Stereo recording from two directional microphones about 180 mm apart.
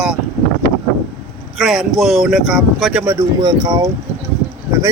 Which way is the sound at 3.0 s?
15° right (ahead or behind).